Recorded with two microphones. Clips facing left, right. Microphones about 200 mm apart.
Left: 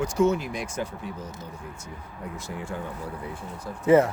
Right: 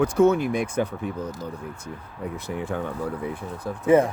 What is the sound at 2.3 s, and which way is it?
Speech, 60° right (ahead or behind).